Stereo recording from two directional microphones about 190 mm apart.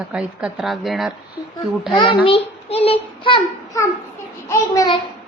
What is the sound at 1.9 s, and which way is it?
A child's voice, 25° left (ahead or behind).